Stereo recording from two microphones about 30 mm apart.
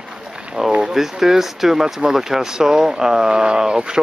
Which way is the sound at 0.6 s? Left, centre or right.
Right.